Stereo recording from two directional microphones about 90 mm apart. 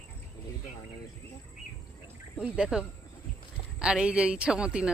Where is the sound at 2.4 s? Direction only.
10° right (ahead or behind).